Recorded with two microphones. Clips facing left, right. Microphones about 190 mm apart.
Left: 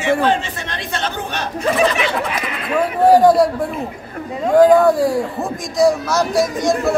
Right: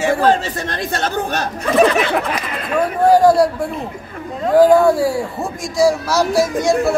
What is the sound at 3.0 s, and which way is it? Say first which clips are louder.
Speech: left 1 dB; centre (ahead or behind).